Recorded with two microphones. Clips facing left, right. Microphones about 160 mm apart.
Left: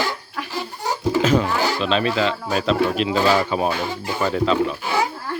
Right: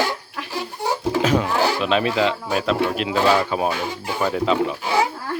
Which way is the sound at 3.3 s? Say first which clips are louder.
Even; 5° left (ahead or behind).